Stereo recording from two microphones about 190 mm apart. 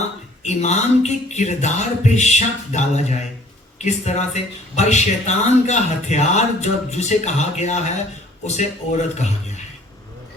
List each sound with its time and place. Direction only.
0.4 s speech: 35° left (ahead or behind)